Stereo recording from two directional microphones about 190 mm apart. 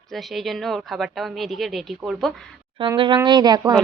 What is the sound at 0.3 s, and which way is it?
A woman's voice, centre (ahead or behind).